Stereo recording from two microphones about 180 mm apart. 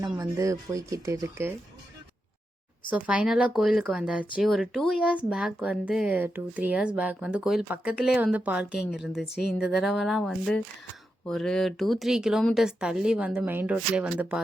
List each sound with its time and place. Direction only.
0.0 s speech: 20° right (ahead or behind)
2.9 s speech: 5° right (ahead or behind)